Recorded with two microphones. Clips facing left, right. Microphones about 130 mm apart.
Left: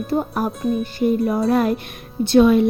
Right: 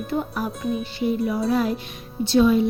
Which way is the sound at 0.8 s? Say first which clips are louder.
Left 5 dB; 50° left (ahead or behind).